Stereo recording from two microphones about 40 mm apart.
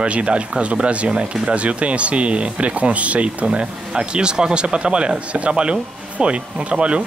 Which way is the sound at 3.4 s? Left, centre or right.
Right.